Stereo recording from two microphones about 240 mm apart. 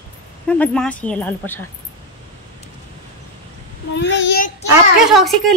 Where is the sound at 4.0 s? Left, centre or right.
Left.